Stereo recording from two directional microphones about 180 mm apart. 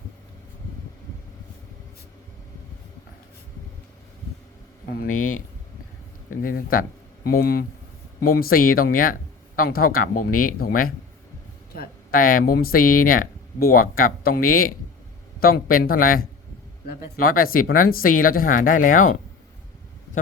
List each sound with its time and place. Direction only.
4.9 s speech: 50° left (ahead or behind)